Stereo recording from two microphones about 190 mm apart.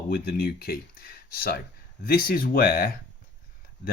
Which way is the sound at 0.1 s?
55° left (ahead or behind).